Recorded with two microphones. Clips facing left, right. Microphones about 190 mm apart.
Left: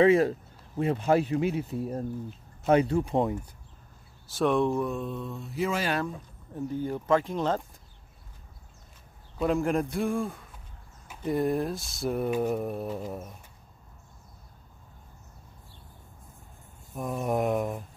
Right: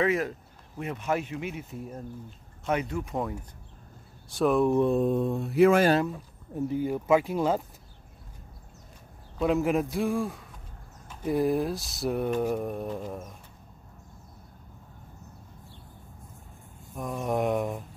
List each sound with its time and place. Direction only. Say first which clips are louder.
0.0 s speech: left 6 dB; 30° left (ahead or behind)
4.3 s speech: right 1 dB; centre (ahead or behind)
4.9 s mantra: right 9 dB; 50° right (ahead or behind)
6.0 s speech: right 2 dB; 10° right (ahead or behind)
9.4 s speech: right 1 dB; centre (ahead or behind)
16.9 s speech: left 1 dB; 5° left (ahead or behind)